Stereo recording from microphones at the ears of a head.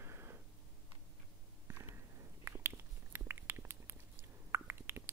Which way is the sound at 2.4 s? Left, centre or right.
Right.